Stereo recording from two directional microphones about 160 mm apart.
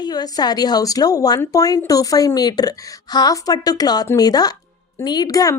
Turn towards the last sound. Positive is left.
turn(degrees=20)  # may be behind; listen again after turning